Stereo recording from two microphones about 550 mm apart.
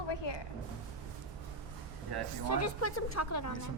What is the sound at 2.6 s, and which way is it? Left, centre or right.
Speech, left.